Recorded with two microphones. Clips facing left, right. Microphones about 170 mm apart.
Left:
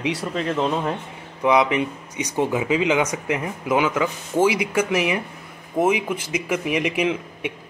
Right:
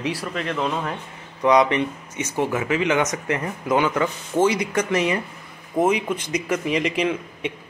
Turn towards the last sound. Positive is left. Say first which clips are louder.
# even
turn(degrees=10)  # may be behind; listen again after turning